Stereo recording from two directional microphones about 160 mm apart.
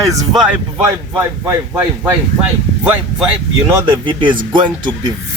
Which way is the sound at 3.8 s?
30° right (ahead or behind).